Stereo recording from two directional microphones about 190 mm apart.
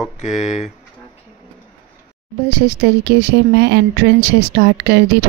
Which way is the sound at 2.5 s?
60° right (ahead or behind).